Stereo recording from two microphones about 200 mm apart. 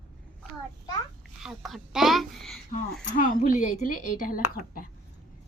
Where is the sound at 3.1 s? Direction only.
40° left (ahead or behind).